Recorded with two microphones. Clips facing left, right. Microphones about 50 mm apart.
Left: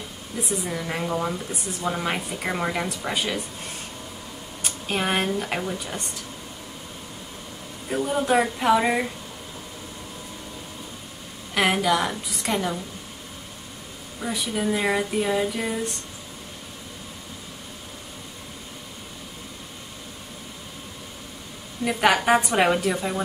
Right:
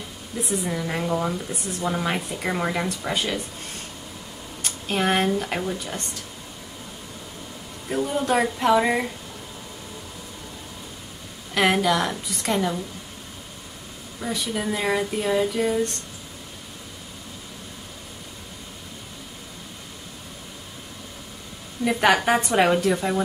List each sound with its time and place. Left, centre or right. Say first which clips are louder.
0.4 s speech: right 2 dB; centre
4.6 s speech: right 2 dB; centre
7.9 s speech: left 1 dB; centre
11.5 s speech: right 1 dB; centre
14.2 s speech: left 1 dB; centre
21.8 s speech: right 1 dB; centre